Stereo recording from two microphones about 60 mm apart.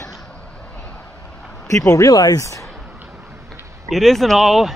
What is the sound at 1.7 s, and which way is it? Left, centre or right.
Speech, left.